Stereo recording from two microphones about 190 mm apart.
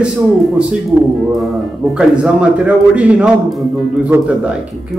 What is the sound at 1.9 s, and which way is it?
A man's voice, 5° right (ahead or behind).